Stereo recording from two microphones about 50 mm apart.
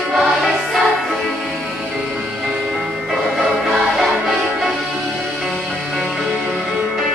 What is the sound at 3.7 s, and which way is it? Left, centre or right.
Music, centre.